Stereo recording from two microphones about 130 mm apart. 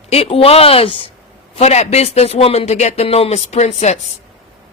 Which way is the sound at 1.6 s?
55° left (ahead or behind).